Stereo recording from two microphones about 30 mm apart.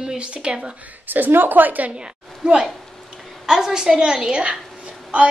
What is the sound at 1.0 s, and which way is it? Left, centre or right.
Speech, right.